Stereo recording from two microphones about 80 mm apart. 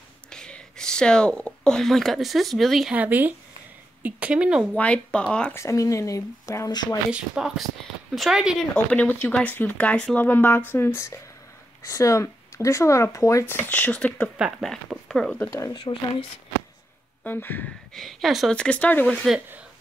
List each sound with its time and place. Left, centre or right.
0.3 s speech: centre
2.9 s speech: right
4.7 s speech: centre
5.5 s speech: left
6.7 s speech: left
7.1 s speech: centre
8.7 s speech: left
13.7 s speech: centre
15.7 s speech: left
17.2 s speech: left
17.9 s speech: centre
18.5 s speech: centre